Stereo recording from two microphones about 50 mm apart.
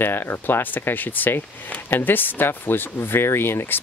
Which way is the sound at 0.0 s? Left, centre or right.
Left.